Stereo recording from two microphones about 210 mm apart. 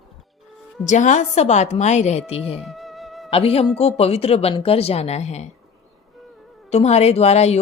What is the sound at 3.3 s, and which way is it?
Speech, 30° left (ahead or behind).